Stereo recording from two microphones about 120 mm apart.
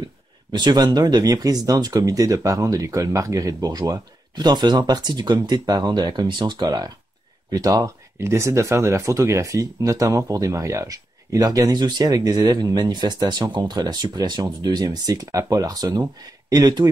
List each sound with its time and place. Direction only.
0.5 s speech: 35° right (ahead or behind)